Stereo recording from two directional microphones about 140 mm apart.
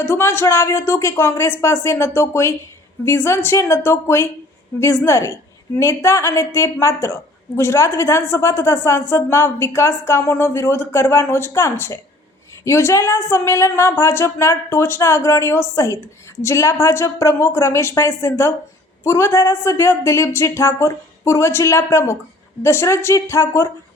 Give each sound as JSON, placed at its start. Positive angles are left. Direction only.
{"t": 0.0, "sound": "a woman's voice", "side_deg": 15}